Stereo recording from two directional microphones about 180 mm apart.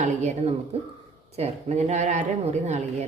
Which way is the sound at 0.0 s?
40° right (ahead or behind).